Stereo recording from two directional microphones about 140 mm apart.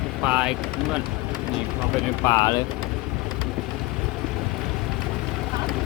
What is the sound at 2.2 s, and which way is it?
Speech, 25° left (ahead or behind).